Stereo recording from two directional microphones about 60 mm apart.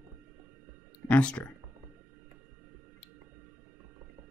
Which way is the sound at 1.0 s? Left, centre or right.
Left.